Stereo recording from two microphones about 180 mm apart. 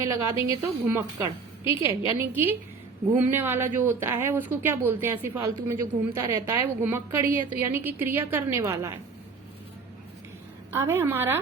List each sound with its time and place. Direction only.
0.0 s speech: 15° right (ahead or behind)
10.7 s speech: 15° right (ahead or behind)